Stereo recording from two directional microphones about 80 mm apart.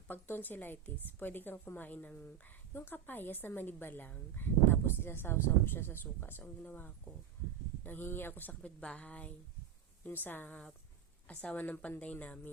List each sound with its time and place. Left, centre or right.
0.1 s a woman's voice: left